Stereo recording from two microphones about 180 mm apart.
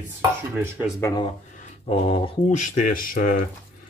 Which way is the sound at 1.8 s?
40° left (ahead or behind).